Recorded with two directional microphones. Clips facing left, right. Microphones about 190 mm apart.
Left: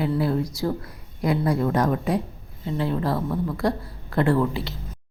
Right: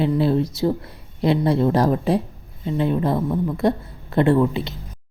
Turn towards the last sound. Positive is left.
turn(degrees=-20)  # may be behind; listen again after turning